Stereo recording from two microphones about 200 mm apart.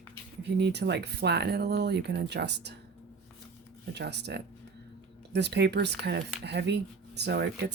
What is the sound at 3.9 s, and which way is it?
Speech, 55° right (ahead or behind).